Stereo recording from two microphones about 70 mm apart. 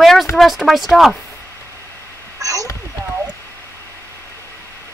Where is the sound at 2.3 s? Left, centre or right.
Right.